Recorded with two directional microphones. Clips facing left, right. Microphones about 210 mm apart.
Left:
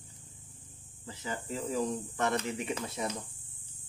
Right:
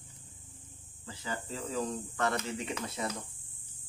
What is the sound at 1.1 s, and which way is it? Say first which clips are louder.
Speech: left 2 dB; 20° left (ahead or behind).